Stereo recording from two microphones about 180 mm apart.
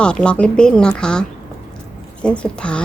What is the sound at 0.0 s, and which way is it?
A woman's voice, 5° left (ahead or behind).